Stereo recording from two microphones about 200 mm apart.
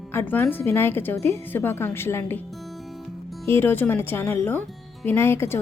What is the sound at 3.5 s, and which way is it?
A woman's voice, 10° left (ahead or behind).